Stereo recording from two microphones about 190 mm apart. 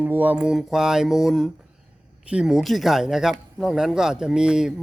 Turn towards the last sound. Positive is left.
turn(degrees=-5)  # may be behind; listen again after turning